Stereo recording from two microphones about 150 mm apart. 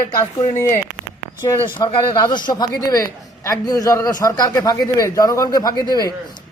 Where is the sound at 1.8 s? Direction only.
30° left (ahead or behind).